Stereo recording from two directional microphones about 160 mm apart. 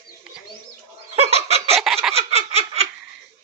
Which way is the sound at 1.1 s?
40° right (ahead or behind).